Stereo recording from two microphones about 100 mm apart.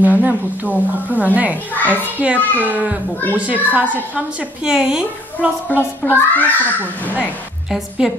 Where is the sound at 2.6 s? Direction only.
15° right (ahead or behind).